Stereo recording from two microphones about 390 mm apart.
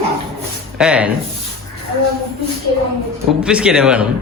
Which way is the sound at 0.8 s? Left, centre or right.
Centre.